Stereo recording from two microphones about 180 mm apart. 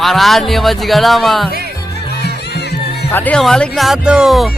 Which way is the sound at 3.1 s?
10° left (ahead or behind).